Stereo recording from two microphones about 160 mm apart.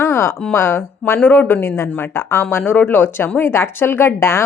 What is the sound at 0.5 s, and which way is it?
Speech, 15° left (ahead or behind).